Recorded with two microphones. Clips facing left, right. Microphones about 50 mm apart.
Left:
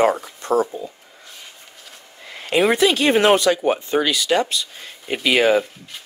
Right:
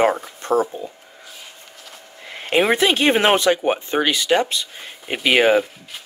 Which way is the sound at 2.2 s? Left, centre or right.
Right.